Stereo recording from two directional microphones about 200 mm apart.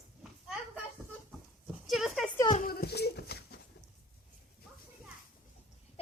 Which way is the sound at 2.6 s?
50° left (ahead or behind).